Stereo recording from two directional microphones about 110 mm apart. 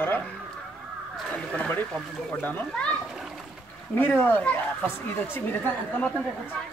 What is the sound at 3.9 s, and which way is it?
Speech, 20° left (ahead or behind).